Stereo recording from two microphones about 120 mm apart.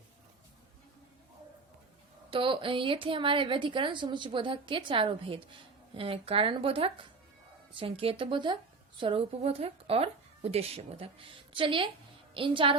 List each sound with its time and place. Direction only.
2.3 s a woman's voice: 45° right (ahead or behind)